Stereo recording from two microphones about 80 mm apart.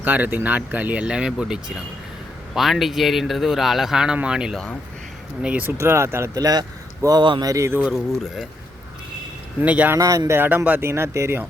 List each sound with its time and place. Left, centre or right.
0.0 s speech: right
5.7 s speech: right
6.3 s speech: right
7.2 s speech: right
7.4 s speech: right
9.6 s speech: centre
10.0 s speech: right
10.3 s speech: right